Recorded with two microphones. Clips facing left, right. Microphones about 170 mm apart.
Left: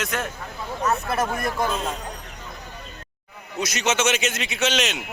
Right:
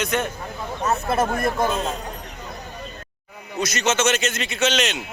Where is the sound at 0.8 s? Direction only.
25° right (ahead or behind).